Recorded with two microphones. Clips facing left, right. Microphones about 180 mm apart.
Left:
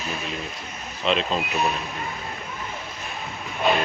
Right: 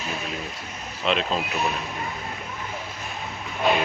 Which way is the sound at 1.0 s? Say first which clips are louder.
Left 1 dB; centre (ahead or behind).